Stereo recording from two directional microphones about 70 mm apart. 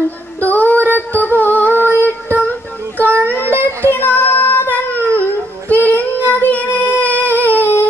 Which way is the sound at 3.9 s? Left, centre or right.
Left.